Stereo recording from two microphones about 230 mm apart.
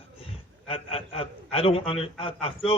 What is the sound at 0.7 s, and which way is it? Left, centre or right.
A man's voice, left.